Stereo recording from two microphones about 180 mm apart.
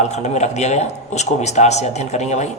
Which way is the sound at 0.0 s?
40° left (ahead or behind).